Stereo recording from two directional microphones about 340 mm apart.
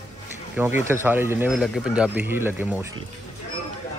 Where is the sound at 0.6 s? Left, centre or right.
Centre.